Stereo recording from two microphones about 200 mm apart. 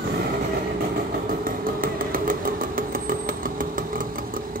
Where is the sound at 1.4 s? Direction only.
45° right (ahead or behind).